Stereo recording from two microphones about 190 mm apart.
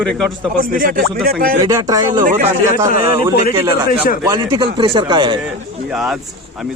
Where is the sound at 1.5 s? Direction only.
20° right (ahead or behind).